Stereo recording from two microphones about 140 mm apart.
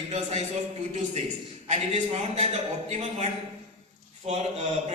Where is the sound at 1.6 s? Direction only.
55° right (ahead or behind).